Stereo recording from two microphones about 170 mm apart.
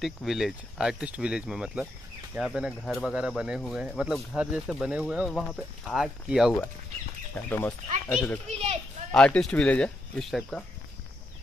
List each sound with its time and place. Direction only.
0.0 s speech: centre (ahead or behind)
7.3 s speech: 10° left (ahead or behind)
8.5 s a child's voice: 40° right (ahead or behind)
9.1 s speech: 5° left (ahead or behind)